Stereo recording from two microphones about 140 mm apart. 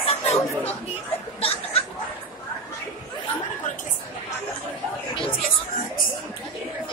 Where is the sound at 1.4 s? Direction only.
45° left (ahead or behind).